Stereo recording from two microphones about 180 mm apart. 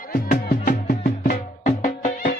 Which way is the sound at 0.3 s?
55° left (ahead or behind).